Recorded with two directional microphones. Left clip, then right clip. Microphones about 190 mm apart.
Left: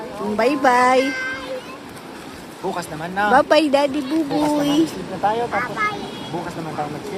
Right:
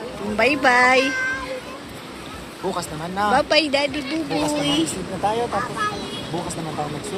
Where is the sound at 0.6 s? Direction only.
25° left (ahead or behind).